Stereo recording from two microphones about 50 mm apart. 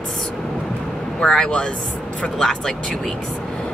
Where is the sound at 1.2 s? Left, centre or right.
Centre.